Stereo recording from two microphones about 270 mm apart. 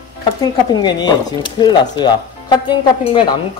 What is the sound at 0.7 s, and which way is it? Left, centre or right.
Speech, centre.